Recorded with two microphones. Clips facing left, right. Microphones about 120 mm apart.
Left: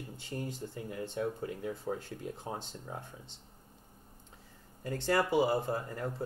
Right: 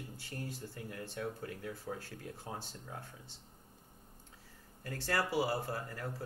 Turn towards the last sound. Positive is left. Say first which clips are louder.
# left 5 dB
turn(degrees=20)  # may be behind; listen again after turning